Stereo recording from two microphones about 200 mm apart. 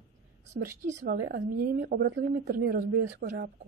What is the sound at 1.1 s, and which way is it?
Speech, 60° right (ahead or behind).